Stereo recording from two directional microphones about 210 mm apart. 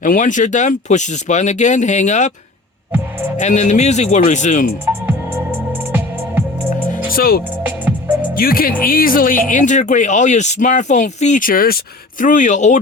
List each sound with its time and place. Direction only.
0.0 s speech: 35° left (ahead or behind)
3.3 s speech: 35° left (ahead or behind)
4.9 s music: 10° right (ahead or behind)
7.1 s speech: 45° left (ahead or behind)